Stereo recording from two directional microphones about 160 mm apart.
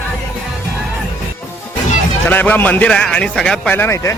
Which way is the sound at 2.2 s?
10° left (ahead or behind).